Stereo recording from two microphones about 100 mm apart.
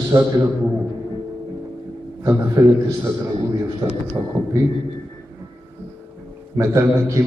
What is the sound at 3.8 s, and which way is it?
Speech, 30° right (ahead or behind).